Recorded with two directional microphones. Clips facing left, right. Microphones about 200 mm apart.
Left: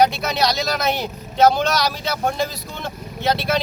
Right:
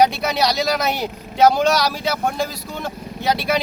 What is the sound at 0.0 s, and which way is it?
Speech, 10° right (ahead or behind).